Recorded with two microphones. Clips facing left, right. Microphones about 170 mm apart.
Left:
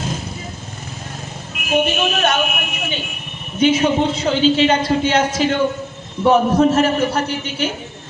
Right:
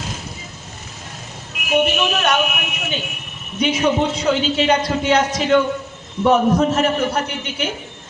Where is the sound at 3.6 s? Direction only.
25° left (ahead or behind).